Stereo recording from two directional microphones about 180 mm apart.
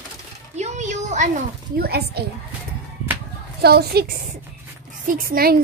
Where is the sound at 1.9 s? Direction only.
60° right (ahead or behind).